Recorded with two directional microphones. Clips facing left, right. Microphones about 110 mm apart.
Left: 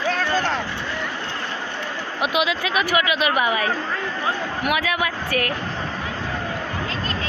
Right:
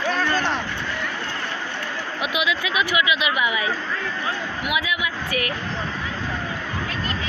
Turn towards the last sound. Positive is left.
turn(degrees=40)  # may be behind; listen again after turning